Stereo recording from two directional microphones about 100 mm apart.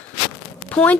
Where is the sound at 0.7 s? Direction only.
15° left (ahead or behind).